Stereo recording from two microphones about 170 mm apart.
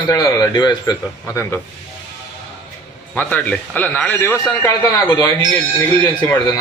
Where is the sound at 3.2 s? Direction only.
10° left (ahead or behind).